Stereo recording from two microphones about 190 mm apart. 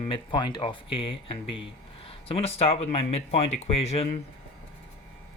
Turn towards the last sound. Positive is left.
turn(degrees=35)  # may be behind; listen again after turning